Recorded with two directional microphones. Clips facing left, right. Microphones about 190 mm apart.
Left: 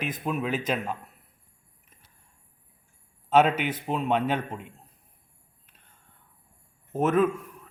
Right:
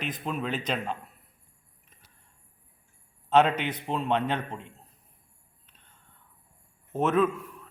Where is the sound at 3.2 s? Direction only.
5° left (ahead or behind).